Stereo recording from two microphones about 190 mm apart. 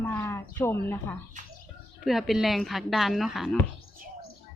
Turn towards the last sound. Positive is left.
turn(degrees=0)  # may be behind; listen again after turning